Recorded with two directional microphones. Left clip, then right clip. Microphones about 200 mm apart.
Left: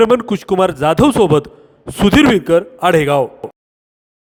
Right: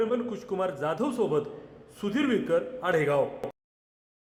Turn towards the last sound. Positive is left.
turn(degrees=45)  # may be behind; listen again after turning